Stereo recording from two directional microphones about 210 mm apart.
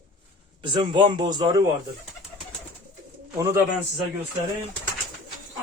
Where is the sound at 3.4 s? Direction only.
15° right (ahead or behind).